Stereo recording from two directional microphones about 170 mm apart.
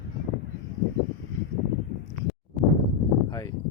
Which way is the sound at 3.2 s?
20° left (ahead or behind).